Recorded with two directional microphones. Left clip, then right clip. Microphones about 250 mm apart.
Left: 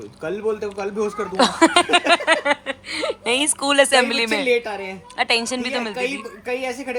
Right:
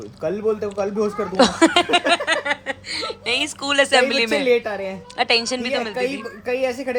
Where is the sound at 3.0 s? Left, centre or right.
Centre.